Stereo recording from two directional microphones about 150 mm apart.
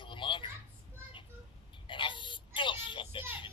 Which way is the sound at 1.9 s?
35° left (ahead or behind).